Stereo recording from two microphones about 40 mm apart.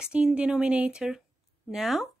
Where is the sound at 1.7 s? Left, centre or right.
Centre.